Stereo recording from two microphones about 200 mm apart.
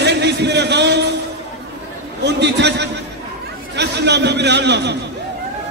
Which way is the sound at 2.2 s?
60° right (ahead or behind).